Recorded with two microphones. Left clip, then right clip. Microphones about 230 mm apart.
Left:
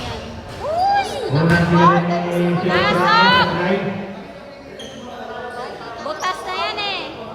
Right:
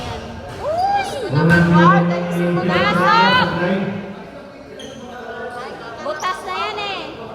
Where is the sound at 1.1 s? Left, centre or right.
Left.